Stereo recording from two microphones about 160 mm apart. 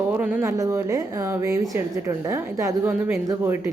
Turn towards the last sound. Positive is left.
turn(degrees=-15)  # may be behind; listen again after turning